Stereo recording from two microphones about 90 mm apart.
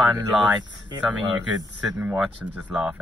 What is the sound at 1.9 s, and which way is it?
Speech, 10° right (ahead or behind).